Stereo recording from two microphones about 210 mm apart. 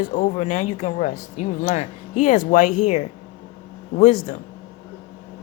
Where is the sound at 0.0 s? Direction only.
35° left (ahead or behind).